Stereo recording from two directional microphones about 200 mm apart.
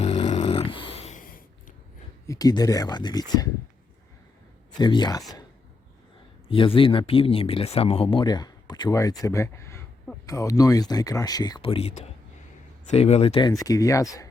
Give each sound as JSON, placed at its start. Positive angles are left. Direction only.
{"t": 0.0, "sound": "snoring", "side_deg": 35}
{"t": 2.2, "sound": "speech", "side_deg": 15}
{"t": 4.8, "sound": "speech", "side_deg": 20}
{"t": 6.5, "sound": "speech", "side_deg": 25}
{"t": 13.5, "sound": "speech", "side_deg": 15}